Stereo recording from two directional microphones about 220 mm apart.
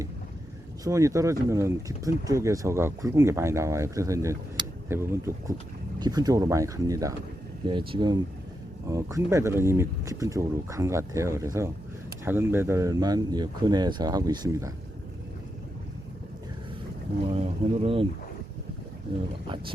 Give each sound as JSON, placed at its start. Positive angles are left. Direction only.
{"t": 0.9, "sound": "speech", "side_deg": -15}
{"t": 17.2, "sound": "speech", "side_deg": -25}